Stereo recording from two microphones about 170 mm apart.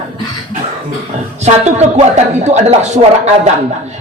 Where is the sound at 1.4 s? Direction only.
40° right (ahead or behind).